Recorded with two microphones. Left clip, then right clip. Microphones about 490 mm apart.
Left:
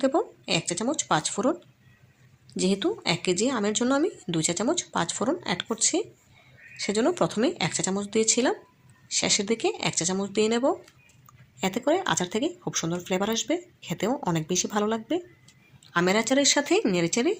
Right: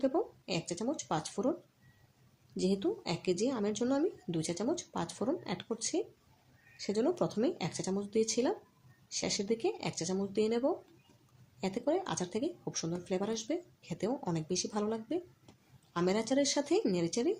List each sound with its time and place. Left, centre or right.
0.0 s speech: left
2.6 s speech: left